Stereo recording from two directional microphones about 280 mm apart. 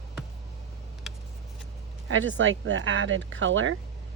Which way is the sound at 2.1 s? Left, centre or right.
Right.